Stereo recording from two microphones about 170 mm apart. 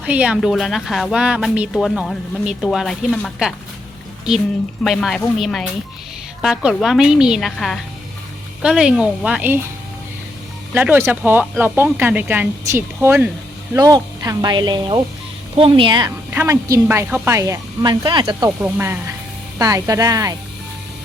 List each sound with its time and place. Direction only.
0.0 s speech: 5° right (ahead or behind)
4.8 s speech: centre (ahead or behind)
10.8 s speech: 10° right (ahead or behind); by 16.1 s 25° right (ahead or behind)
16.3 s speech: 15° right (ahead or behind)
18.6 s speech: 15° right (ahead or behind)